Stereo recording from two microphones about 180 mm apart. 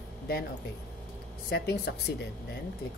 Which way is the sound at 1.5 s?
65° left (ahead or behind).